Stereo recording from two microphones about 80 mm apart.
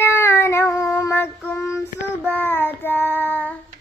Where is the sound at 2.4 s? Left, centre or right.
Left.